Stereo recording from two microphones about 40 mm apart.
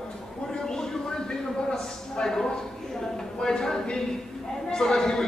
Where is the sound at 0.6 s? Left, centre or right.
Centre.